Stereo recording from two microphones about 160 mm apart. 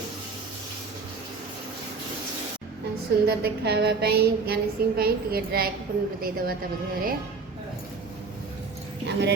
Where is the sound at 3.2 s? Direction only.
80° right.